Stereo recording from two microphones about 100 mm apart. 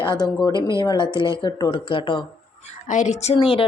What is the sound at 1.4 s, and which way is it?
Speech, 40° left (ahead or behind).